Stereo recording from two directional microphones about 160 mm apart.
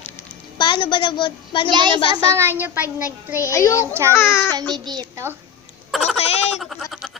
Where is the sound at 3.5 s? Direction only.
20° left (ahead or behind).